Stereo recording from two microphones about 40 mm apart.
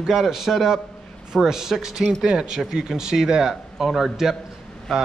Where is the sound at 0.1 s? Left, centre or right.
Centre.